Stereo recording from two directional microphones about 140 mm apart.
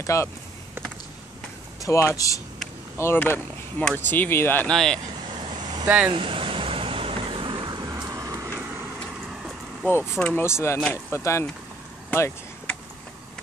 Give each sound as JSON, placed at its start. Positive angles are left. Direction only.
{"t": 0.0, "sound": "speech", "side_deg": 20}
{"t": 1.8, "sound": "speech", "side_deg": 20}
{"t": 5.4, "sound": "vehicle", "side_deg": -35}
{"t": 5.9, "sound": "speech", "side_deg": -10}
{"t": 6.1, "sound": "vehicle", "side_deg": -40}
{"t": 9.9, "sound": "speech", "side_deg": 15}
{"t": 12.1, "sound": "vehicle", "side_deg": 15}